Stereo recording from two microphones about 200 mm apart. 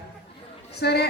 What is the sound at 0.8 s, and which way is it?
Speech, 55° left (ahead or behind).